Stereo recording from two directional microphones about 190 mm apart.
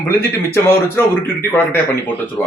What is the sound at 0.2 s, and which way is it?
Speech, 10° left (ahead or behind).